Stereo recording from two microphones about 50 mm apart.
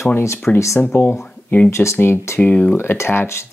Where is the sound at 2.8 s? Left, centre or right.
Left.